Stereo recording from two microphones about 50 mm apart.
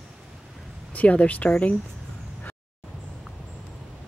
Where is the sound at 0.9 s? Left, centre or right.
Left.